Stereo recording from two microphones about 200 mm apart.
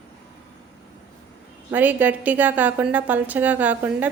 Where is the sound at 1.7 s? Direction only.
10° right (ahead or behind).